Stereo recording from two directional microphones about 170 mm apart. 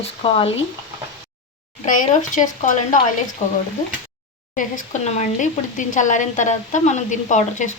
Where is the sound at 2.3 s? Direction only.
50° left (ahead or behind).